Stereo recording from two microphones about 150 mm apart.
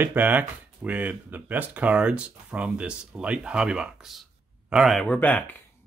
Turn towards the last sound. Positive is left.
turn(degrees=10)  # may be behind; listen again after turning